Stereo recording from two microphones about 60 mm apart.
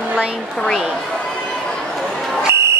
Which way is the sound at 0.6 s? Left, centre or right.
Centre.